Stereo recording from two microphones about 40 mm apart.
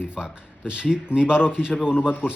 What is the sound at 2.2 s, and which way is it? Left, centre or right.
Speech, left.